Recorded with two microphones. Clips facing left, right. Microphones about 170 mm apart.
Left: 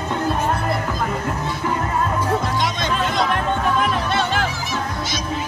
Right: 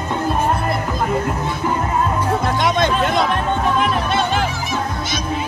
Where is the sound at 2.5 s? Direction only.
55° right (ahead or behind).